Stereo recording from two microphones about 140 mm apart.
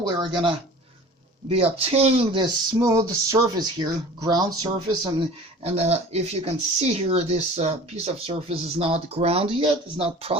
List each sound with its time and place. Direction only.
0.0 s speech: 35° right (ahead or behind)
2.3 s a sound: 35° right (ahead or behind)
2.9 s speech: 25° right (ahead or behind)
5.6 s speech: 50° right (ahead or behind)